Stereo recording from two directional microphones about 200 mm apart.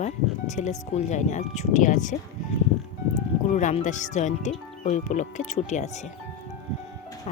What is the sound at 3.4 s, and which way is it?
Speech, 35° left (ahead or behind).